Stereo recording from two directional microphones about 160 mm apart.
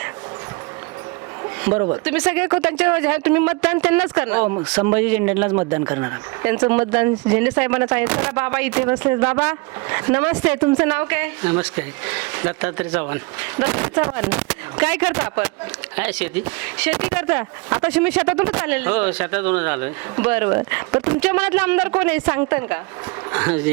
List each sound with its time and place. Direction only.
2.0 s speech: 5° right (ahead or behind)
8.9 s speech: 20° right (ahead or behind)
9.2 s speech: 10° right (ahead or behind)